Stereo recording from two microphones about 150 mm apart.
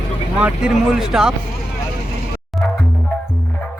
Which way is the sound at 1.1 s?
5° right (ahead or behind).